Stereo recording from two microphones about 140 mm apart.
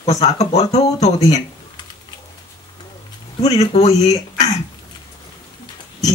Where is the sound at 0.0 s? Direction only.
55° left (ahead or behind).